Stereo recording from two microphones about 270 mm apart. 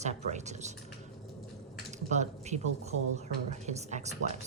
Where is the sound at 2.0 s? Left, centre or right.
Right.